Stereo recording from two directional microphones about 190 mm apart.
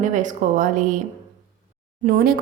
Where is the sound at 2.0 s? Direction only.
50° right (ahead or behind).